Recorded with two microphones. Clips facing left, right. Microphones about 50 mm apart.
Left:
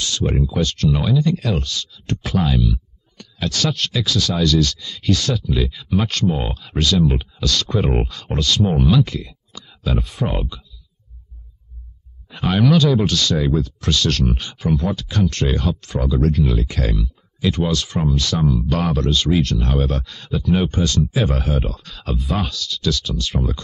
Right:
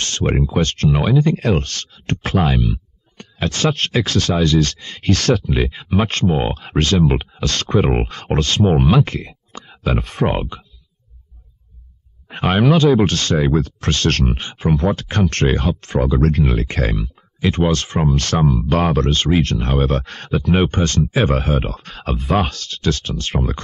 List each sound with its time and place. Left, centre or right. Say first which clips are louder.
0.4 s speech: right 2 dB; right
7.8 s speech: right 2 dB; right
8.1 s speech: right 2 dB; right
12.3 s speech: right 2 dB; right
14.2 s speech: right 1 dB; right
14.8 s speech: right 3 dB; right
18.1 s speech: right 2 dB; right
18.5 s speech: right 3 dB; right